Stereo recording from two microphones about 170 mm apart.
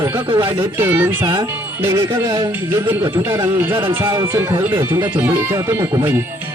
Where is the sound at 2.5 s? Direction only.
15° right (ahead or behind).